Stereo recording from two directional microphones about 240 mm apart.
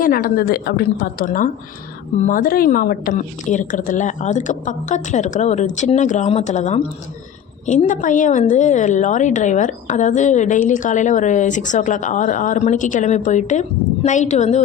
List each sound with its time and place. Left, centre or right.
0.0 s a woman's voice: left